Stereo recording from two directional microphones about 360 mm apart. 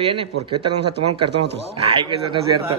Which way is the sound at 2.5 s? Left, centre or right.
Centre.